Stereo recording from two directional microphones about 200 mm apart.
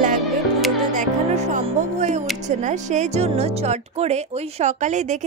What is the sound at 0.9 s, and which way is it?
A woman's voice, 35° right (ahead or behind).